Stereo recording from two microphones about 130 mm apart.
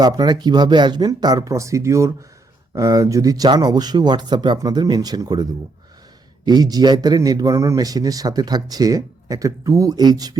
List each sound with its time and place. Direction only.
0.0 s a man's voice: 30° right (ahead or behind)